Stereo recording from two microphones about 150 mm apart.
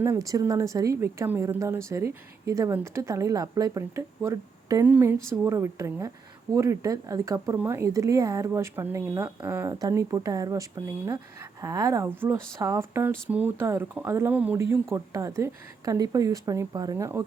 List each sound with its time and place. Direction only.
0.0 s a woman's voice: 20° right (ahead or behind)